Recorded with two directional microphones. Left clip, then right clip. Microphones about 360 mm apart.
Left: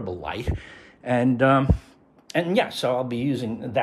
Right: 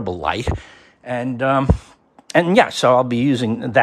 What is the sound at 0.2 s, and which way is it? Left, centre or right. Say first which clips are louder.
Speech: right 10 dB; centre.